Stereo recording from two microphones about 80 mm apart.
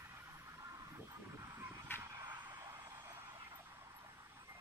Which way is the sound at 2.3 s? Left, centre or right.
Right.